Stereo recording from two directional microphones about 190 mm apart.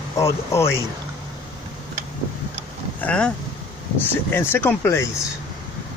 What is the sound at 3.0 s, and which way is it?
Speech, 5° left (ahead or behind).